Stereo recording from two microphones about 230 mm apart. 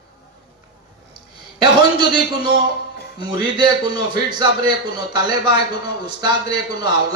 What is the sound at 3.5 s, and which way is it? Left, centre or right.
A man's voice, centre.